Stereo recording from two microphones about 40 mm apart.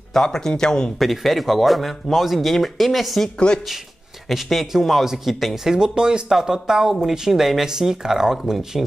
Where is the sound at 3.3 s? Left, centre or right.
Left.